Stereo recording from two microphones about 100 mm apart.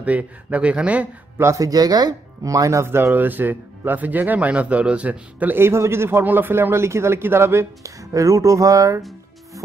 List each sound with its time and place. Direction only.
0.0 s speech: 15° right (ahead or behind)
1.4 s speech: 30° right (ahead or behind)